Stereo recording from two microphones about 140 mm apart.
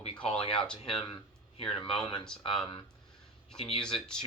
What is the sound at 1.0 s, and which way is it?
Speech, 35° left (ahead or behind).